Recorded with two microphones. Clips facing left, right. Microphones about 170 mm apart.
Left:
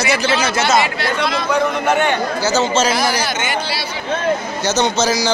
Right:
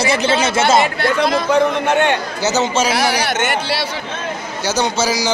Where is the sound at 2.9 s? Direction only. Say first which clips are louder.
Right 1 dB; 70° right (ahead or behind).